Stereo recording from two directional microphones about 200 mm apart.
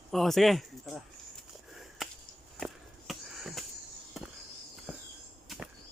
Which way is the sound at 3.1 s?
Centre (ahead or behind).